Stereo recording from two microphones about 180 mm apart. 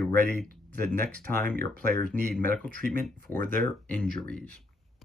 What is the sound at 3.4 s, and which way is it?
Speech, 50° right (ahead or behind).